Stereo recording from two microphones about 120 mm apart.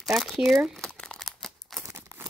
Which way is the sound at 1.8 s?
20° right (ahead or behind).